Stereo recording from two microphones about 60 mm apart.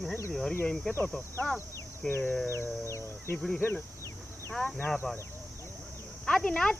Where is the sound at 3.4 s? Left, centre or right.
Centre.